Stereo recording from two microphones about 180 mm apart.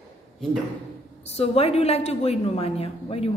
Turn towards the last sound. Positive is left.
turn(degrees=35)  # may be behind; listen again after turning